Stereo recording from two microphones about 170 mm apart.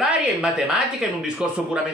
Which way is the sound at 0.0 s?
5° right (ahead or behind).